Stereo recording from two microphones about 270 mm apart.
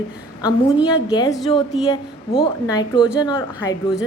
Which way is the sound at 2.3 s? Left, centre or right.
Centre.